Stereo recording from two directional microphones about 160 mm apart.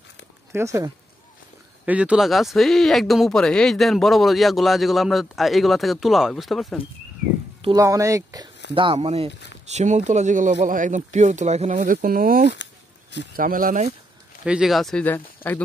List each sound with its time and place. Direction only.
0.5 s speech: 15° right (ahead or behind)
1.9 s speech: 5° right (ahead or behind)
7.7 s speech: 20° right (ahead or behind)
8.7 s speech: 35° right (ahead or behind); by 13.9 s 60° right (ahead or behind)
14.4 s speech: 5° right (ahead or behind); by 15.6 s 10° left (ahead or behind)